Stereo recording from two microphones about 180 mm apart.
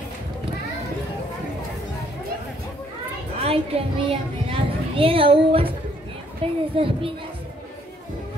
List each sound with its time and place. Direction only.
3.3 s a woman's voice: 35° right (ahead or behind)